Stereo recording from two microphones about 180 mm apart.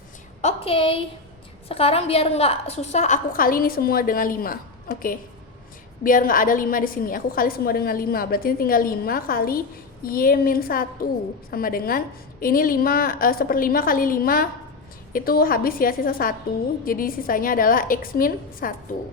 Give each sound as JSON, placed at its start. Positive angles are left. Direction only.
{"t": 0.4, "sound": "a woman's voice", "side_deg": 30}